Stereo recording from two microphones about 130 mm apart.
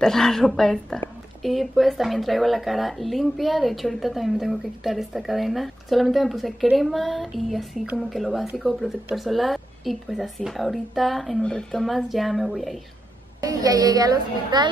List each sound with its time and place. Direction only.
0.0 s a woman's voice: 5° left (ahead or behind)
13.4 s a child's voice: 30° right (ahead or behind)